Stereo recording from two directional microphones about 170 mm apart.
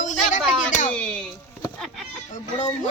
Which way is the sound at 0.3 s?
45° left (ahead or behind).